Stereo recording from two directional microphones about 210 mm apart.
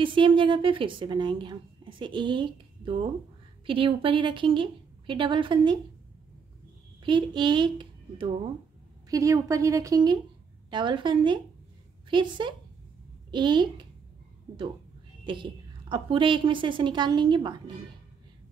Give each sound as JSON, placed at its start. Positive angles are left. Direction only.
{"t": 0.0, "sound": "a woman's voice", "side_deg": -25}
{"t": 7.0, "sound": "a woman's voice", "side_deg": -20}
{"t": 15.2, "sound": "a woman's voice", "side_deg": -25}